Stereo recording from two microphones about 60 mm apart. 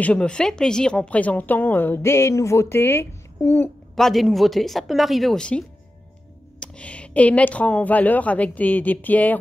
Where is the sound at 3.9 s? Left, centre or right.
Centre.